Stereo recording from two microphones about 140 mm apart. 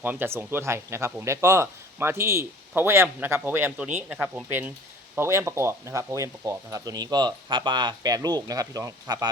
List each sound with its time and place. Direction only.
0.0 s speech: 15° right (ahead or behind)